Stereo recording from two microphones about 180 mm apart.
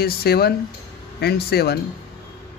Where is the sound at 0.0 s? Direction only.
60° left (ahead or behind).